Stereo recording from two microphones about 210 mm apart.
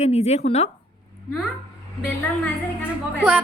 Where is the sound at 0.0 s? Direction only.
30° left (ahead or behind).